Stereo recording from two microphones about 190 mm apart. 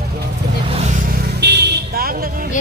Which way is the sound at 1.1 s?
60° right (ahead or behind).